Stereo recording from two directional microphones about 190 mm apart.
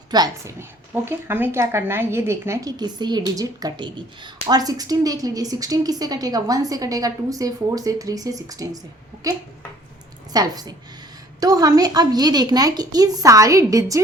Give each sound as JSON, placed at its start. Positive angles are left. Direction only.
{"t": 0.1, "sound": "a woman's voice", "side_deg": -20}
{"t": 10.3, "sound": "a woman's voice", "side_deg": -20}